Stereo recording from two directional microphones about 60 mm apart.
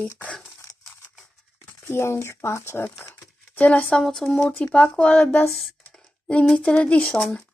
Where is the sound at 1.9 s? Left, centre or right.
Left.